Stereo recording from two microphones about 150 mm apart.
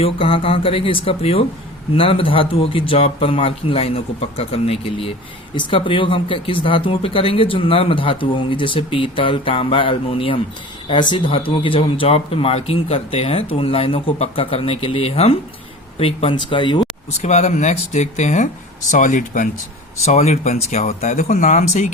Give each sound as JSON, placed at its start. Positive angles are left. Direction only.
{"t": 0.0, "sound": "speech", "side_deg": 35}
{"t": 17.2, "sound": "speech", "side_deg": 50}
{"t": 20.1, "sound": "speech", "side_deg": 45}